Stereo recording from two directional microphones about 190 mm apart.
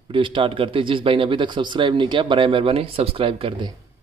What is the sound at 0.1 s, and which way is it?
Speech, 25° right (ahead or behind).